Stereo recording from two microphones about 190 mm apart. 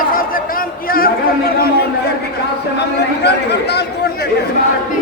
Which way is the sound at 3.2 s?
60° left (ahead or behind).